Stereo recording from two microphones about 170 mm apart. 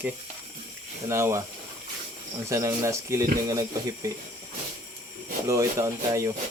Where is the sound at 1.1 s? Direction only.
15° right (ahead or behind).